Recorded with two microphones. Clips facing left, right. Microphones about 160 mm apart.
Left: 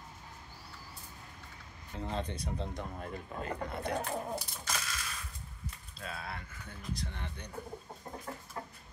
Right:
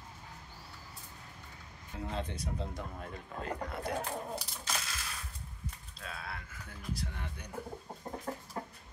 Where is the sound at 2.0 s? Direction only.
5° right (ahead or behind).